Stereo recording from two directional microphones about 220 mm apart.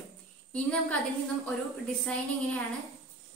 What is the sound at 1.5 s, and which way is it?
A woman's voice, 5° left (ahead or behind).